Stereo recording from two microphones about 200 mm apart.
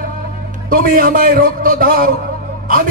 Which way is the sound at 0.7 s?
45° right (ahead or behind).